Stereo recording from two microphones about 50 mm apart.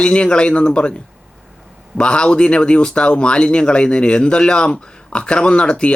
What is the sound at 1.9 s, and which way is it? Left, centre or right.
Speech, centre.